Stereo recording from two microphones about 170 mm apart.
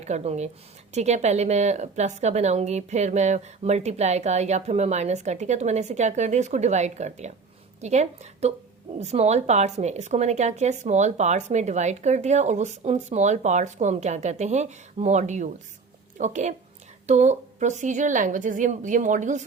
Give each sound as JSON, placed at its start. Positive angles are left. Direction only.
{"t": 0.0, "sound": "a woman's voice", "side_deg": -40}